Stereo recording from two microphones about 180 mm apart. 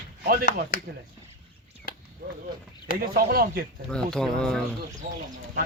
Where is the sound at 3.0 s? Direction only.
55° right (ahead or behind).